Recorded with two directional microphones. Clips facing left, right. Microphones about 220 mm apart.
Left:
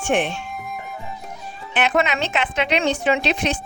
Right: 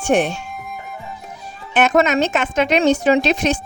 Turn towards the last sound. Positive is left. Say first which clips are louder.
# right 5 dB
turn(degrees=-45)  # may be behind; listen again after turning